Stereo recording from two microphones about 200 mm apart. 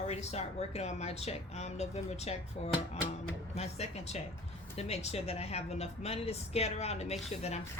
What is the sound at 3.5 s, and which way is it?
A woman's voice, 30° left (ahead or behind).